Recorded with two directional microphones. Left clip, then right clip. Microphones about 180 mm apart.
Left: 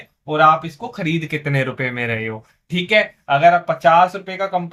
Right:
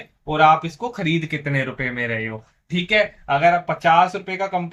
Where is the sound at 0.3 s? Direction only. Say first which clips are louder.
Left 1 dB; 35° left (ahead or behind).